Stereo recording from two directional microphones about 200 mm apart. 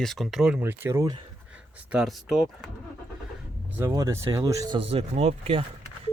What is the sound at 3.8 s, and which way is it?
Speech, 15° right (ahead or behind).